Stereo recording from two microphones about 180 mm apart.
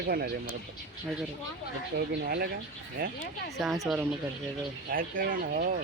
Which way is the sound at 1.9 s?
60° right (ahead or behind).